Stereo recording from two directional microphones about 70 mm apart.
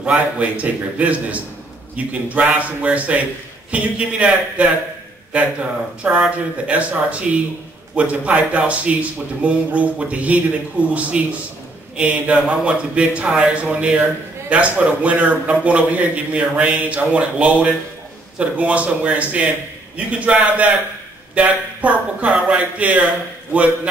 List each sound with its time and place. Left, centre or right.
0.0 s a man's voice: centre